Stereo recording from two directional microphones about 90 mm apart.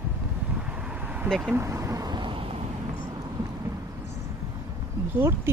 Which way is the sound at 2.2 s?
80° right.